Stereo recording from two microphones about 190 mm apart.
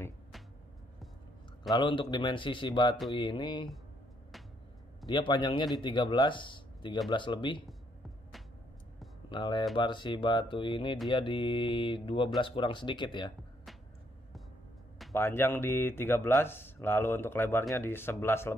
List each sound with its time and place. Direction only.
1.7 s speech: 25° left (ahead or behind)
5.0 s speech: 25° left (ahead or behind)
9.3 s speech: 25° left (ahead or behind)
15.1 s speech: 15° left (ahead or behind)